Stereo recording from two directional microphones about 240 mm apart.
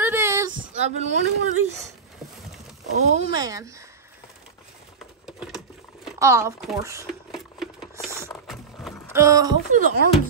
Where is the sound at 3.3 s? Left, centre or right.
Centre.